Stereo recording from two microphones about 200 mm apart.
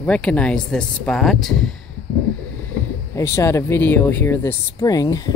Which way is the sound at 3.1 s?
15° left (ahead or behind).